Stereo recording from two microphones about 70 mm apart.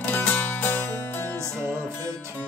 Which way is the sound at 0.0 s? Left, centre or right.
Left.